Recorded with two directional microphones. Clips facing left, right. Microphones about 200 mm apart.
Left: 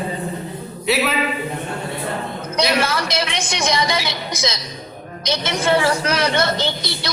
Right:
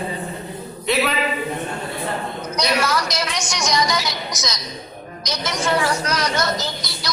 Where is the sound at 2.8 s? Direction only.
30° left (ahead or behind).